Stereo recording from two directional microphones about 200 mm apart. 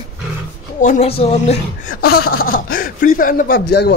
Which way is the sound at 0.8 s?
35° left (ahead or behind).